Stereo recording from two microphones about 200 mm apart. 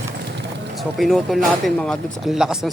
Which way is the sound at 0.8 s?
Centre (ahead or behind).